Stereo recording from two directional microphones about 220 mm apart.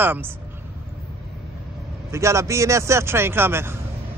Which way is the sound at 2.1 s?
15° right (ahead or behind).